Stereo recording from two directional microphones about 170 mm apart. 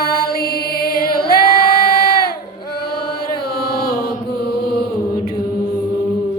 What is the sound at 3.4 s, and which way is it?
Chant, 65° left (ahead or behind).